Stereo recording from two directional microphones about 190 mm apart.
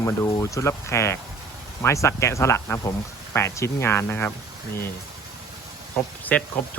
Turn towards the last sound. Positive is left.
turn(degrees=5)  # may be behind; listen again after turning